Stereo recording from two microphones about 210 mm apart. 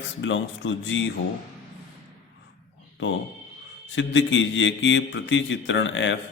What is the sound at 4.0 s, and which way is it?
A man's voice, 60° left (ahead or behind).